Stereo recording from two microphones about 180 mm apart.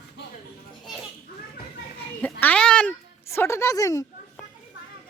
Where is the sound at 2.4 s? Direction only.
5° left (ahead or behind).